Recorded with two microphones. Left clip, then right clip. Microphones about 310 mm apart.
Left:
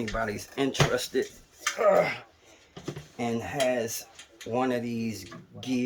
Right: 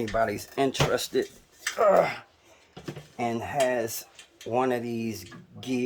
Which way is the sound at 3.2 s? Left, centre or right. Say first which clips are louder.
Right 3 dB; centre.